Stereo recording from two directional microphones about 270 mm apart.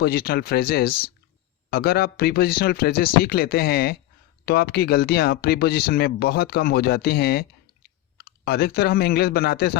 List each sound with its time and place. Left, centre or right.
0.0 s speech: left
8.4 s speech: left